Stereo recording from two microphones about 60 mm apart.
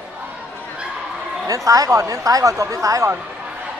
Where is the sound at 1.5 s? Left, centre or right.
Right.